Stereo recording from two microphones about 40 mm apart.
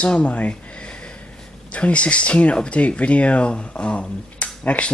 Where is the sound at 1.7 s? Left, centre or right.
Left.